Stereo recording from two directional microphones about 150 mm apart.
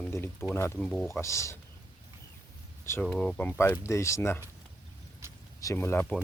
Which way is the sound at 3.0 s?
5° left (ahead or behind).